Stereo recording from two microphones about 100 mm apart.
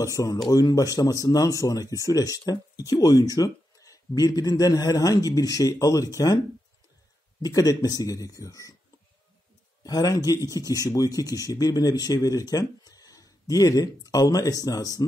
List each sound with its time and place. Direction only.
0.0 s speech: 35° left (ahead or behind)
7.4 s speech: 40° left (ahead or behind)
9.8 s speech: 35° left (ahead or behind)